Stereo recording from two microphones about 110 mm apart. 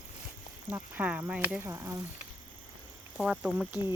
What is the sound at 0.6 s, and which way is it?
Speech, 15° right (ahead or behind).